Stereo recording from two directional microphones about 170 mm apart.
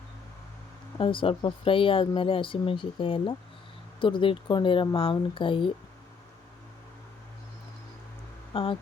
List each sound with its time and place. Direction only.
0.9 s speech: 30° left (ahead or behind)
8.5 s speech: 30° left (ahead or behind)